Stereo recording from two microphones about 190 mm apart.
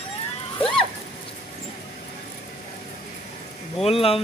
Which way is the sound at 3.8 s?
30° left (ahead or behind).